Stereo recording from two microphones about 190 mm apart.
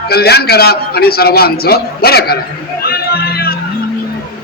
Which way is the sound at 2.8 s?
55° left (ahead or behind).